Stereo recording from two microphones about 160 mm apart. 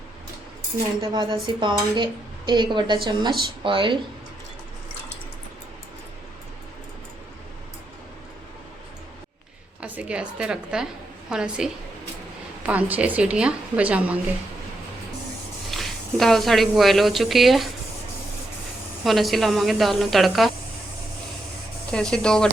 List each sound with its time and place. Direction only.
1.0 s speech: 25° right (ahead or behind)
9.8 s a woman's voice: 10° right (ahead or behind)
15.7 s a woman's voice: centre (ahead or behind)
19.0 s a woman's voice: centre (ahead or behind)
21.9 s a woman's voice: 5° left (ahead or behind)